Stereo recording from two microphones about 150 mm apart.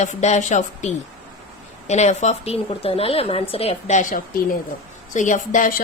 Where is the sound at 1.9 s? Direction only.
50° left (ahead or behind).